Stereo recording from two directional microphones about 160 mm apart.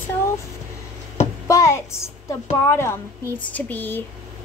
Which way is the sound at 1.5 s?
20° left (ahead or behind).